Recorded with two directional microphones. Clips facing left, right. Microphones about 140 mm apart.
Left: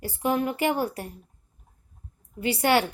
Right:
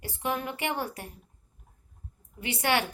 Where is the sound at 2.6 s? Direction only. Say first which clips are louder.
Left 5 dB; 25° left (ahead or behind).